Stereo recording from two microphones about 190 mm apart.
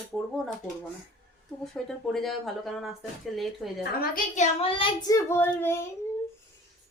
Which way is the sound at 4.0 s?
40° left (ahead or behind).